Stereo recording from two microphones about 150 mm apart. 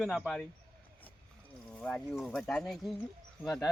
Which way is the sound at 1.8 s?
5° left (ahead or behind).